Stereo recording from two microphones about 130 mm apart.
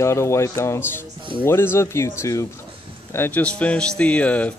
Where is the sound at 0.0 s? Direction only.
20° left (ahead or behind).